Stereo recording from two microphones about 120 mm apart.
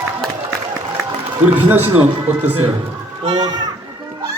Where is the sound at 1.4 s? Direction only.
15° right (ahead or behind).